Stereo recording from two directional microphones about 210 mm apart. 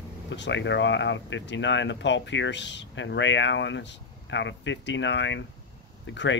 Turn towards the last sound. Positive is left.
turn(degrees=60)  # may be behind; listen again after turning